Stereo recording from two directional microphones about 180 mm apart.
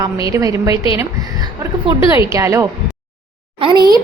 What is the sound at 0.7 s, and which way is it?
Speech, 30° left (ahead or behind).